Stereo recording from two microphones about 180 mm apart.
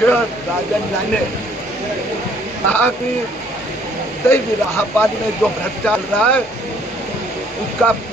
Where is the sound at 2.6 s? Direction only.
10° left (ahead or behind).